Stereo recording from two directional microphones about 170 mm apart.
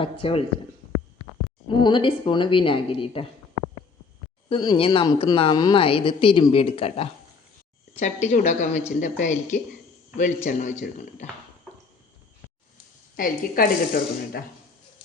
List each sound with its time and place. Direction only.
0.0 s speech: 30° left (ahead or behind)
1.6 s speech: 25° left (ahead or behind)
4.4 s speech: 25° left (ahead or behind)
7.9 s speech: 45° left (ahead or behind)
13.1 s speech: 55° left (ahead or behind)